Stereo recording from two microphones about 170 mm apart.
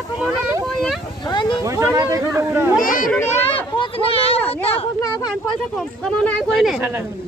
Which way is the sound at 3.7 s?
35° left (ahead or behind).